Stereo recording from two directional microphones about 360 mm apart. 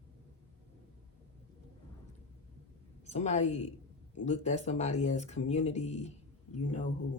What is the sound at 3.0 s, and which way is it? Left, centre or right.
A woman's voice, centre.